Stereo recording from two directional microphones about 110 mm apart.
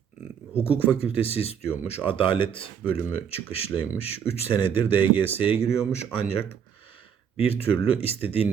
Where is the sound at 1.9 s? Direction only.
55° left (ahead or behind).